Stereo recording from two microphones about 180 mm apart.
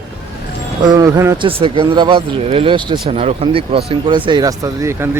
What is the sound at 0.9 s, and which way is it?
Speech, 20° right (ahead or behind).